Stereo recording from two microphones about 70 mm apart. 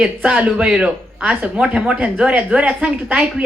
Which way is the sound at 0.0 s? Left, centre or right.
Centre.